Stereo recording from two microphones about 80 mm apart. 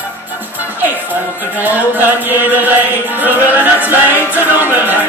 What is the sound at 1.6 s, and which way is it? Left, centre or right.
Music, right.